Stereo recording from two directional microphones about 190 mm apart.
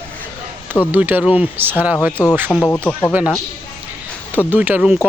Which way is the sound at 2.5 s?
10° left (ahead or behind).